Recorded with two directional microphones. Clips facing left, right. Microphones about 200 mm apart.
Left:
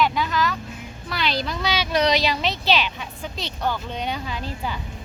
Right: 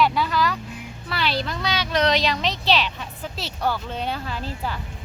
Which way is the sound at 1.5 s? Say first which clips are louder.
Left 1 dB; 10° left (ahead or behind).